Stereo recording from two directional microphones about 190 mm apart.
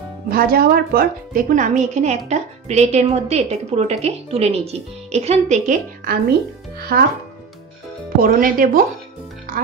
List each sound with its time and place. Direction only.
0.3 s a woman's voice: 50° right (ahead or behind)
6.9 s speech: 55° right (ahead or behind)
8.2 s speech: 45° right (ahead or behind)